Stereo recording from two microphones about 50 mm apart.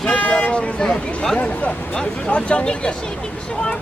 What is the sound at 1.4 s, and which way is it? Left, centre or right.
Speech, left.